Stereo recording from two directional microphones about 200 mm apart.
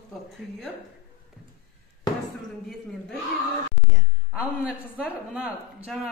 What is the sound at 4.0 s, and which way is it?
Speech, 5° right (ahead or behind).